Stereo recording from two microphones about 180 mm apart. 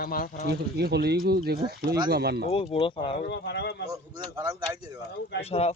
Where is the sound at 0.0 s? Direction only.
50° left (ahead or behind).